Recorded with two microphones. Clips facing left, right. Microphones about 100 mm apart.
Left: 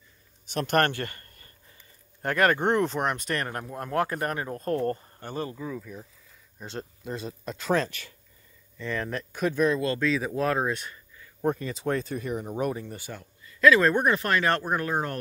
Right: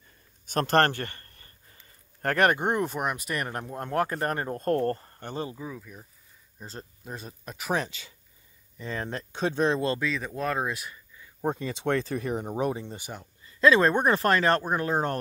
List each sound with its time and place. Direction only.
0.5 s speech: 45° right (ahead or behind)
0.7 s a sound: 35° right (ahead or behind)
2.2 s speech: 30° right (ahead or behind)
2.5 s speech: 10° right (ahead or behind)
3.4 s speech: 25° right (ahead or behind); by 5.0 s 45° right (ahead or behind)
5.3 s speech: 20° right (ahead or behind)
5.6 s speech: 5° right (ahead or behind)
7.1 s speech: 5° right (ahead or behind); by 9.9 s 30° right (ahead or behind)
9.9 s speech: centre (ahead or behind)
11.4 s speech: 25° right (ahead or behind)
14.0 s speech: 35° right (ahead or behind)